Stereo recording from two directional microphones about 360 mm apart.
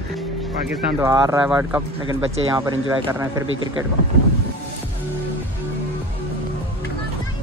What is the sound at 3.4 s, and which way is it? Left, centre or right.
Speech, right.